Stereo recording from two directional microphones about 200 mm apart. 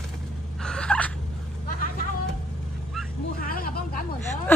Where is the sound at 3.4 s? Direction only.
45° left (ahead or behind).